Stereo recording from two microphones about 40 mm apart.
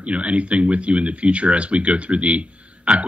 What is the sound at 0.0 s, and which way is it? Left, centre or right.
Speech, right.